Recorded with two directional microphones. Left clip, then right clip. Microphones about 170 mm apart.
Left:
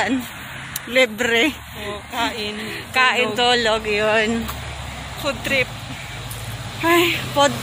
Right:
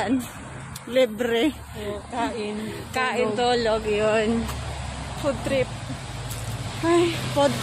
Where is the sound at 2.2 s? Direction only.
45° right (ahead or behind).